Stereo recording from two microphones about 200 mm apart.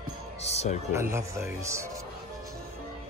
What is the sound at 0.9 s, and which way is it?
Speech, 15° right (ahead or behind).